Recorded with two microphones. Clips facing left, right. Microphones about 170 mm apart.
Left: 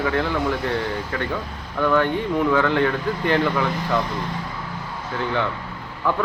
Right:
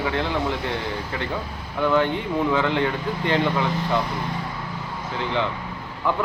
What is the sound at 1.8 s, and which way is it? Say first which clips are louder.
A man's voice: left 1 dB; 20° right (ahead or behind).